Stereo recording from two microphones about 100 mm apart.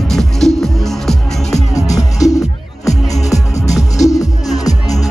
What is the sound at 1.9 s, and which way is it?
Music, 35° left (ahead or behind).